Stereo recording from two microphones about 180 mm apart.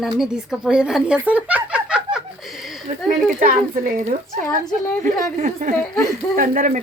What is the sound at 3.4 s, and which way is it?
Speech, 50° right (ahead or behind).